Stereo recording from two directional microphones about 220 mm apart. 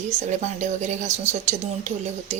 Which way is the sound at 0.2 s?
35° right (ahead or behind).